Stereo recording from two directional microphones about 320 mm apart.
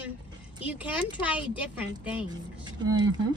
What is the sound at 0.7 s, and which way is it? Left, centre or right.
Speech, centre.